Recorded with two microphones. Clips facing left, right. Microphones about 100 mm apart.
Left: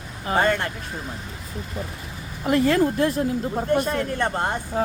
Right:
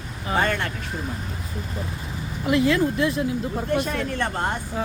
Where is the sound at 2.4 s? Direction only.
45° left (ahead or behind).